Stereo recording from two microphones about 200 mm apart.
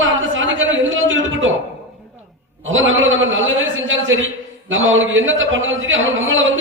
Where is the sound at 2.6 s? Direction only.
75° right (ahead or behind).